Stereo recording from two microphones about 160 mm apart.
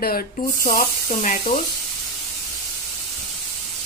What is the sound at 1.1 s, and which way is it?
Speech, 45° left (ahead or behind).